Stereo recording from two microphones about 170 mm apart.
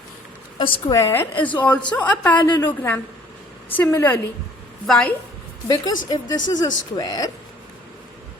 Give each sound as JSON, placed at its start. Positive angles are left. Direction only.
{"t": 0.6, "sound": "a woman's voice", "side_deg": 25}
{"t": 5.6, "sound": "speech", "side_deg": 20}